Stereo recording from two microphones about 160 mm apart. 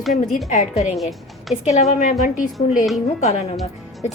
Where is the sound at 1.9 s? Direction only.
55° left (ahead or behind).